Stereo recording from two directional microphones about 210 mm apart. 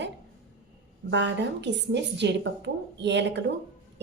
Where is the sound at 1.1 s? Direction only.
55° right (ahead or behind).